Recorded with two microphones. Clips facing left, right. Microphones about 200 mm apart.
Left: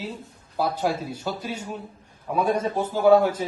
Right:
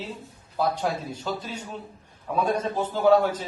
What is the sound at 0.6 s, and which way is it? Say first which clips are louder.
A man's voice: left 1 dB; 10° left (ahead or behind).